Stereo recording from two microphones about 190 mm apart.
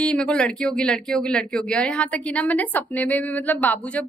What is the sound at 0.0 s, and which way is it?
Speech, 5° left (ahead or behind).